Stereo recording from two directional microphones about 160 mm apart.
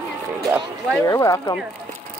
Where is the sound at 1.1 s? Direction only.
20° left (ahead or behind).